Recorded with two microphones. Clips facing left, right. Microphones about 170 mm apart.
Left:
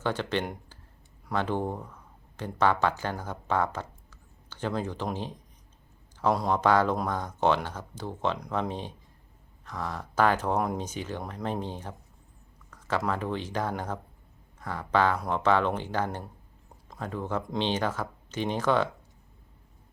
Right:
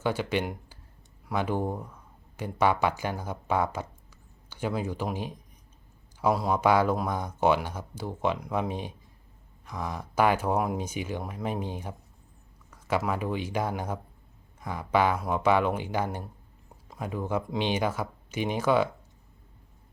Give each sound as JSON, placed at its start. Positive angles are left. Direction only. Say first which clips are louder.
{"t": 0.0, "sound": "speech", "louder": "right 1 dB", "side_deg": -10}